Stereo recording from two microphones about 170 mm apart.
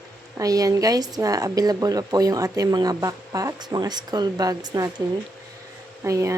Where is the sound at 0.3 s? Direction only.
20° right (ahead or behind).